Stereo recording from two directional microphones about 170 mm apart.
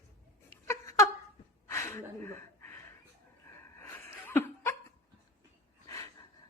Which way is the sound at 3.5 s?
15° left (ahead or behind).